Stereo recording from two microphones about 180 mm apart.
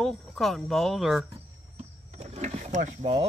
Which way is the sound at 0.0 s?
Centre (ahead or behind).